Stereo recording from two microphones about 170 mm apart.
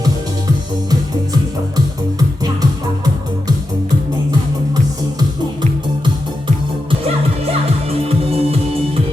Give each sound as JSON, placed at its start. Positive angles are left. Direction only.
{"t": 0.9, "sound": "music", "side_deg": -20}
{"t": 8.3, "sound": "music", "side_deg": -35}